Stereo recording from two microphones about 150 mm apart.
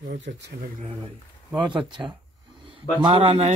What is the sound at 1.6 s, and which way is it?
Speech, 30° right (ahead or behind).